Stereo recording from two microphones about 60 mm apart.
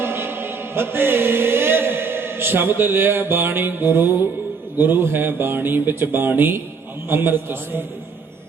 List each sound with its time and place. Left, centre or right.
0.0 s chant: right
4.8 s speech: right